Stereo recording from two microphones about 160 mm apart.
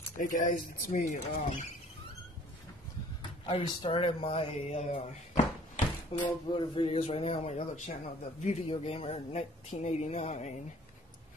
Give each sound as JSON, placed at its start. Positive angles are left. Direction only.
{"t": 0.2, "sound": "speech", "side_deg": 55}
{"t": 3.2, "sound": "speech", "side_deg": 30}